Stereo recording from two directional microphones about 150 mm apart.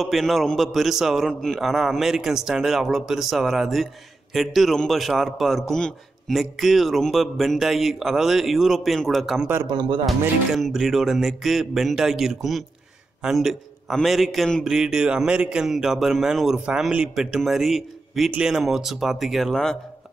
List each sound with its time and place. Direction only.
0.0 s a man's voice: centre (ahead or behind)
9.7 s speech: 30° right (ahead or behind)
10.0 s a man's voice: centre (ahead or behind)